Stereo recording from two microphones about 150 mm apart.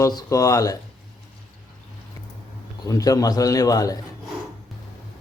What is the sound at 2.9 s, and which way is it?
A man's voice, 25° left (ahead or behind).